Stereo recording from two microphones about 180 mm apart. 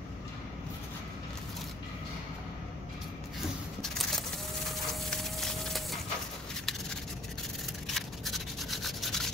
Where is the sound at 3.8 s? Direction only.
Centre (ahead or behind).